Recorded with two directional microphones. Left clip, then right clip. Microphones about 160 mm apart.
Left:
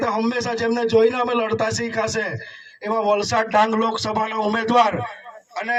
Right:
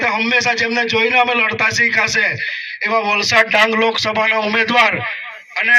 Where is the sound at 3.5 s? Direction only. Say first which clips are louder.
Right 4 dB; 55° left (ahead or behind).